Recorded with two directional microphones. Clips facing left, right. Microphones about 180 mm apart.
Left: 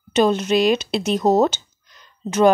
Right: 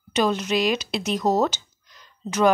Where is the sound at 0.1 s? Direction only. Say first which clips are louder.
Left 5 dB; 25° left (ahead or behind).